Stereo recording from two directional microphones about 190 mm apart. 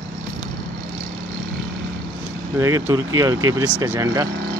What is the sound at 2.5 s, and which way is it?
Speech, 15° right (ahead or behind).